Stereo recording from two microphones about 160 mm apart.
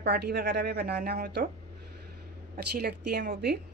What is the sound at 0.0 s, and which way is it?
A woman's voice, 85° right.